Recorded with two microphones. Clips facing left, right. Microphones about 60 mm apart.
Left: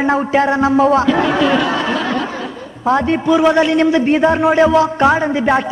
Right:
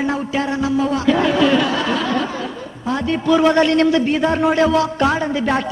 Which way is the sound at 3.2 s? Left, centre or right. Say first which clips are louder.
Even; centre.